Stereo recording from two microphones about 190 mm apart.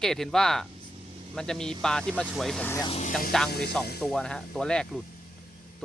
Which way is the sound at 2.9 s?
35° left (ahead or behind).